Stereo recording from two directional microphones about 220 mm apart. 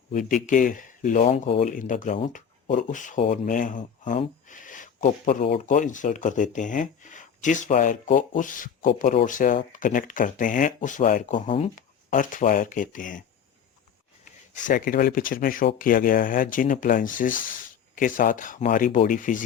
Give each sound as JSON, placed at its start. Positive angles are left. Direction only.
{"t": 0.1, "sound": "speech", "side_deg": 35}
{"t": 14.5, "sound": "speech", "side_deg": 35}